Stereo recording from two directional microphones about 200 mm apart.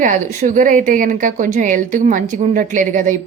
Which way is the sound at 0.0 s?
40° right (ahead or behind).